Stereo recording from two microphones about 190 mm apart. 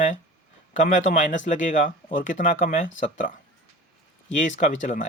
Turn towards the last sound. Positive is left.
turn(degrees=40)  # may be behind; listen again after turning